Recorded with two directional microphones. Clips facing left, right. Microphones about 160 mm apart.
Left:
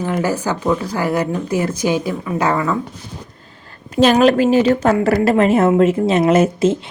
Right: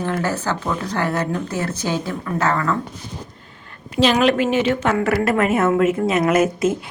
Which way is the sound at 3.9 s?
45° left (ahead or behind).